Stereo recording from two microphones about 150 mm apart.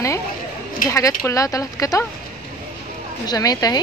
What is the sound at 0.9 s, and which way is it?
A woman's voice, 20° left (ahead or behind).